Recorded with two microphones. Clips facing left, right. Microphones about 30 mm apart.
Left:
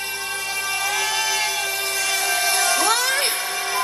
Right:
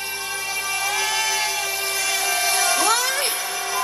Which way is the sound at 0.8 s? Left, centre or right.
Centre.